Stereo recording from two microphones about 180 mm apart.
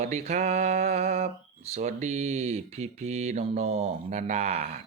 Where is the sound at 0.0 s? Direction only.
40° right (ahead or behind).